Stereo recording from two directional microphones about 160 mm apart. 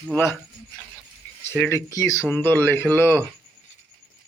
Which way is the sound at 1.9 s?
20° left (ahead or behind).